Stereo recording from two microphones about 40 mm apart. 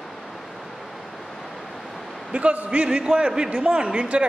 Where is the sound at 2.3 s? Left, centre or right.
Right.